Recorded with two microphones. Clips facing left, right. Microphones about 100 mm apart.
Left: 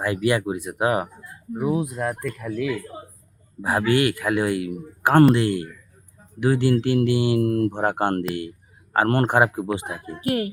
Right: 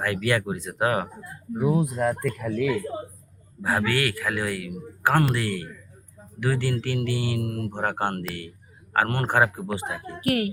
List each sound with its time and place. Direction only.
0.0 s speech: 15° left (ahead or behind)
1.5 s speech: 5° left (ahead or behind)
2.6 s a woman's voice: 25° right (ahead or behind)
3.6 s speech: 20° left (ahead or behind)
7.3 s speech: 30° left (ahead or behind)
7.7 s a man's voice: 20° left (ahead or behind)